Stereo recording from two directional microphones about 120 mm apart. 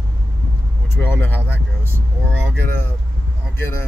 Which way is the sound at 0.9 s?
20° left (ahead or behind).